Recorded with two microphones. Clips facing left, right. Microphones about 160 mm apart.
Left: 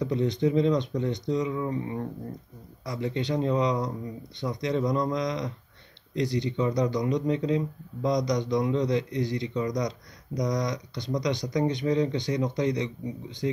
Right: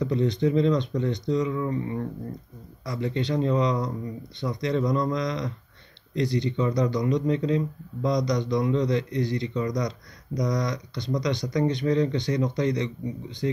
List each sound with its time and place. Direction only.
0.0 s speech: 15° left (ahead or behind)